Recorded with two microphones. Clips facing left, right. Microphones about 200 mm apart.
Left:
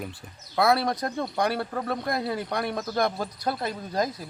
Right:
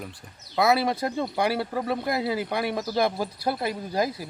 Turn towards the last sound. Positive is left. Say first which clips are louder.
# right 1 dB
turn(degrees=-5)  # may be behind; listen again after turning